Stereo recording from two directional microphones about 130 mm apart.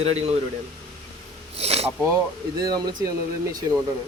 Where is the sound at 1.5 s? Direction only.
55° right (ahead or behind).